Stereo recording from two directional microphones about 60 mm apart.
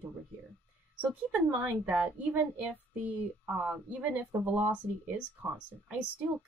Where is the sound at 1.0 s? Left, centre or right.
Right.